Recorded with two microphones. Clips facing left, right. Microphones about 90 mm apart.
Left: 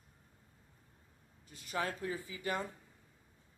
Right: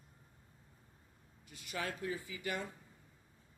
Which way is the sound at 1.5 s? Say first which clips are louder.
Left 4 dB; 35° left (ahead or behind).